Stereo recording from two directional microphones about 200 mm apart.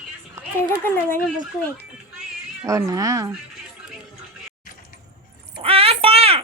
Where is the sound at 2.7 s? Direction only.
15° right (ahead or behind).